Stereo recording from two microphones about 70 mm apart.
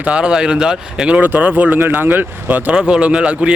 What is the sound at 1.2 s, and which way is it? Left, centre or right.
Speech, right.